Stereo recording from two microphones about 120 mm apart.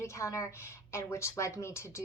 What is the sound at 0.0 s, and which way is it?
A woman's voice, 25° left (ahead or behind).